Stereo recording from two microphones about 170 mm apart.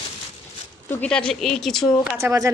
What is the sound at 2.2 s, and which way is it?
Speech, 15° right (ahead or behind).